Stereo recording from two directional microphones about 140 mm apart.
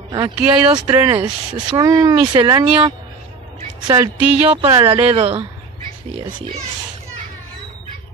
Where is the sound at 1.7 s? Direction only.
30° right (ahead or behind).